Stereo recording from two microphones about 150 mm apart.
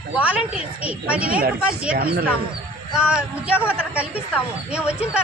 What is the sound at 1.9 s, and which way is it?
Speech, 90° right.